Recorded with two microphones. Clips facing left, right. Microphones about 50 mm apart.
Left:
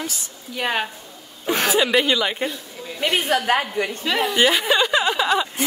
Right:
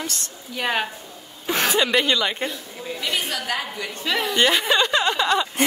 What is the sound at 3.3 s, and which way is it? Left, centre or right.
Speech, left.